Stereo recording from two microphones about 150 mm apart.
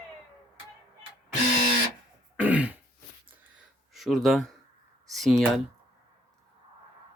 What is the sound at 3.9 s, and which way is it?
Speech, centre (ahead or behind).